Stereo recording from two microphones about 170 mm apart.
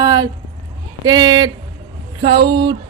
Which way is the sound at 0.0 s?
25° right (ahead or behind).